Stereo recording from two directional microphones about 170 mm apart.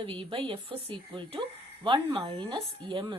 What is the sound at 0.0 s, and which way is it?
A woman's voice, 30° right (ahead or behind).